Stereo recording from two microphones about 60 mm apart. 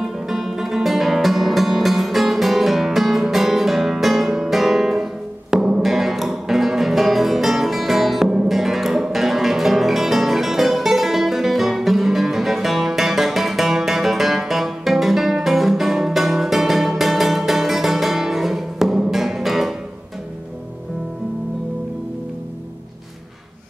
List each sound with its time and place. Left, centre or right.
0.0 s music: centre